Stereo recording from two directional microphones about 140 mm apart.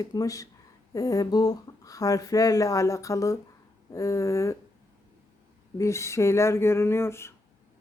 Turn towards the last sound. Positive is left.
turn(degrees=20)  # may be behind; listen again after turning